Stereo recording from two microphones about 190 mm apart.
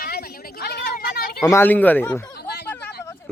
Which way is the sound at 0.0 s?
55° left (ahead or behind).